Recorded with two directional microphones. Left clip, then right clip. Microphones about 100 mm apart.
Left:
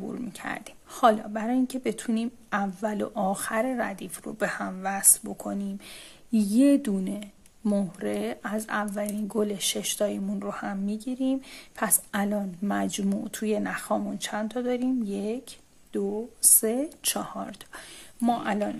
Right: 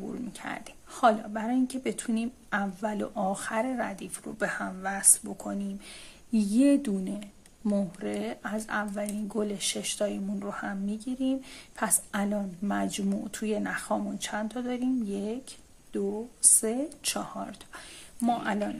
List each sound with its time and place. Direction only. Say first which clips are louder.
0.0 s speech: left 2 dB; 40° left (ahead or behind)